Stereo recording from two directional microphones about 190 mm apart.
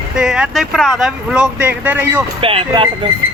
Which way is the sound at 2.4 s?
30° right (ahead or behind).